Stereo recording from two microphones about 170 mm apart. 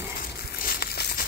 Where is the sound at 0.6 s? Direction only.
65° left (ahead or behind).